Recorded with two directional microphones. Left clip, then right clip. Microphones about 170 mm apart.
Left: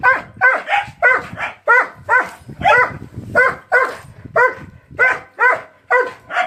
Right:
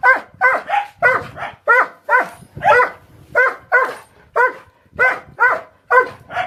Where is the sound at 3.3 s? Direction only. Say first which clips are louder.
Left 1 dB; 10° right (ahead or behind).